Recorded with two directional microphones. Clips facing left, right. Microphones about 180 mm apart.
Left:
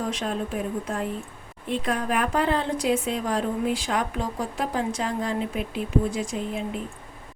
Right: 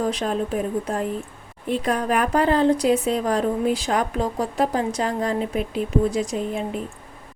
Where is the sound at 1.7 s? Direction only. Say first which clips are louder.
Right 4 dB; 40° right (ahead or behind).